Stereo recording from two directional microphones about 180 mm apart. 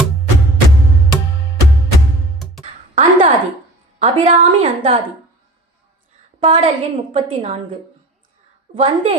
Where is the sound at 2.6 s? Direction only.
40° right (ahead or behind).